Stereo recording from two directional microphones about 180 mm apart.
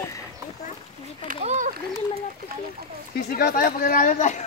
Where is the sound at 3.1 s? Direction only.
60° left (ahead or behind).